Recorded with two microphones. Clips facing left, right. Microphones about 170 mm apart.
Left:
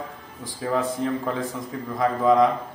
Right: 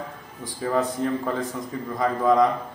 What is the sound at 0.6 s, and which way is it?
A man's voice, 5° left (ahead or behind).